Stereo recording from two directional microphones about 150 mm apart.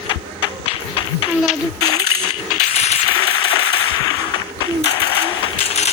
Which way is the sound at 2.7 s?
45° left (ahead or behind).